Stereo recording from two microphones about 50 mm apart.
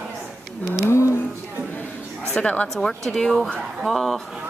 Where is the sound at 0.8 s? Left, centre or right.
Left.